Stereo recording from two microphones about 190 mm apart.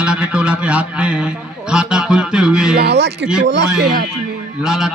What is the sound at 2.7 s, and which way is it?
Speech, 60° right (ahead or behind).